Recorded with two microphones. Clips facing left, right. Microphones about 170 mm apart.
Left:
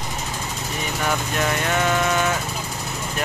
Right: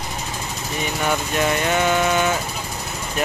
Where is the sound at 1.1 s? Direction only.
5° right (ahead or behind).